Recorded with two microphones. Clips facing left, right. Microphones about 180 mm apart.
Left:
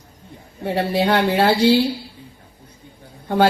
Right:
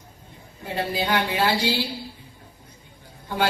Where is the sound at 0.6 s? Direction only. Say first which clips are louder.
Left 7 dB; 65° left (ahead or behind).